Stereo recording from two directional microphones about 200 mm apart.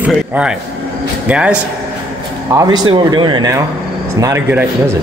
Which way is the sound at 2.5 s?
20° right (ahead or behind).